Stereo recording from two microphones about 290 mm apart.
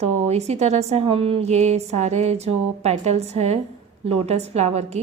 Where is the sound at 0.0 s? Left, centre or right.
Right.